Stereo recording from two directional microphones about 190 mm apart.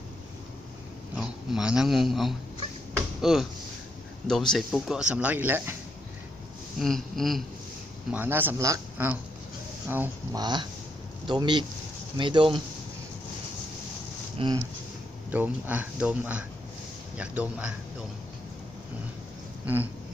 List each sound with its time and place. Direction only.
1.1 s a man's voice: 5° right (ahead or behind)
6.7 s speech: centre (ahead or behind)
8.1 s speech: 10° right (ahead or behind)
10.4 s speech: 20° right (ahead or behind)
14.3 s speech: 25° right (ahead or behind)
15.3 s speech: 10° right (ahead or behind)
19.6 s speech: 10° right (ahead or behind)